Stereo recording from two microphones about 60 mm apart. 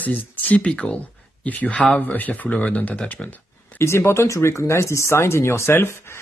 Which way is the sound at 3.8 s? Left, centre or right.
Left.